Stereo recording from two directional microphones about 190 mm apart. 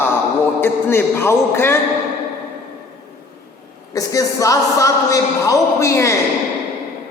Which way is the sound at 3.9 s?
15° left (ahead or behind).